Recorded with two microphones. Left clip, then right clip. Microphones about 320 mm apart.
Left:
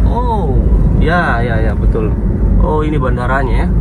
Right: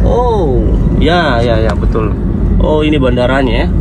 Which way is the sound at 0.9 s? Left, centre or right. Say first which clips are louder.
Right 3 dB; right.